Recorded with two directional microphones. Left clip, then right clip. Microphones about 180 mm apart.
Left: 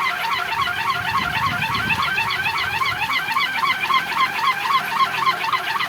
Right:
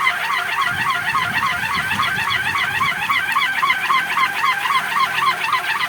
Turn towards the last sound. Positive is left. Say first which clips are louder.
# right 2 dB
turn(degrees=25)  # may be behind; listen again after turning